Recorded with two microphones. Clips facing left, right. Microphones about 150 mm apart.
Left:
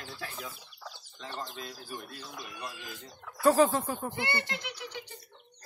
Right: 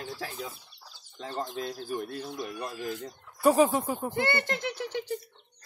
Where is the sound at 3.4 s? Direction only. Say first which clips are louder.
Right 1 dB; 10° right (ahead or behind).